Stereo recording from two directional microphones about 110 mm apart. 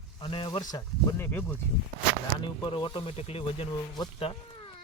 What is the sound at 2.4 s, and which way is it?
Speech, 45° left (ahead or behind).